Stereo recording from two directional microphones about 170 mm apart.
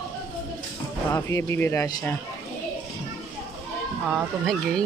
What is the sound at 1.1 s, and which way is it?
Speech, 15° left (ahead or behind).